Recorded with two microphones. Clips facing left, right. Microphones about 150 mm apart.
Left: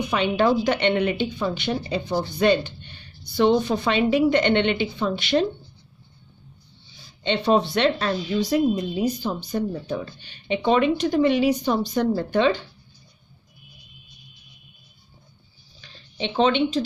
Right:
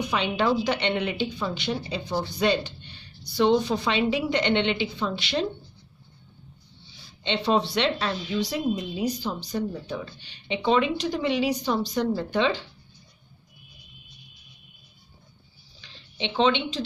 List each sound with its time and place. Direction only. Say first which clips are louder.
0.1 s a woman's voice: left 5 dB; 50° left (ahead or behind)
7.2 s a woman's voice: left 4 dB; 50° left (ahead or behind)
15.8 s speech: left 3 dB; 45° left (ahead or behind)